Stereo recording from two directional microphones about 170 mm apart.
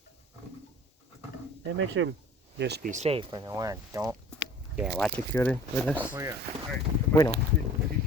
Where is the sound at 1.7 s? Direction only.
90° right.